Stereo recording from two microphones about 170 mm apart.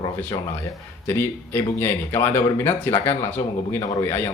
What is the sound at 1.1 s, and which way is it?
Speech, 15° left (ahead or behind).